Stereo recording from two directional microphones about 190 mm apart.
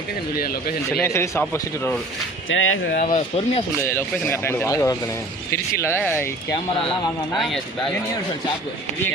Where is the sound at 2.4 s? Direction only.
90° left.